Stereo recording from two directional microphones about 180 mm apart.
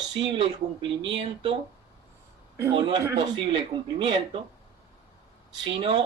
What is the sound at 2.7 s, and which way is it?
Speech, 30° right (ahead or behind).